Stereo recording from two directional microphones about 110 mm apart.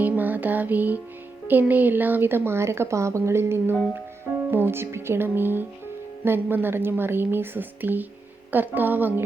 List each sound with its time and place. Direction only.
0.0 s music: 15° right (ahead or behind)
1.5 s a woman's voice: 15° right (ahead or behind)